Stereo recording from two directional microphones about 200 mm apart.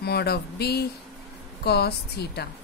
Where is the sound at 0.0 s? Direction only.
55° left (ahead or behind).